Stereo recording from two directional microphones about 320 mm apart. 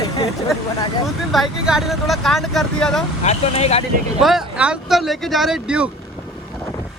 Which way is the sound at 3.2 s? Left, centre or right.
Centre.